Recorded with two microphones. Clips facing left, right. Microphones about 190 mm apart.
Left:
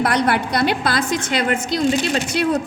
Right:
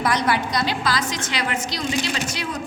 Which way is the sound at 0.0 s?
60° left (ahead or behind).